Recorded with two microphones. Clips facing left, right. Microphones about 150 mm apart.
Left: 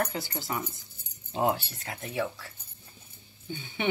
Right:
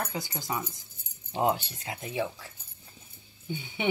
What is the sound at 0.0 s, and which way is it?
Speech, 20° right (ahead or behind).